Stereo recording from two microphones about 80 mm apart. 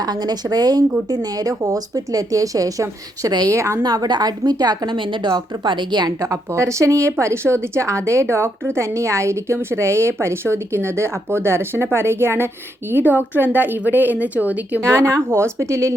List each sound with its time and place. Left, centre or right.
0.0 s a woman's voice: right; by 14.8 s centre
14.8 s a woman's voice: right
15.3 s speech: right